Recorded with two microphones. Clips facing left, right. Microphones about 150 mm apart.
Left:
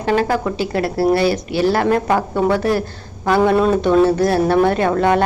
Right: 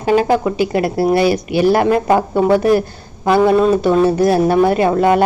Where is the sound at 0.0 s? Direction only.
15° right (ahead or behind).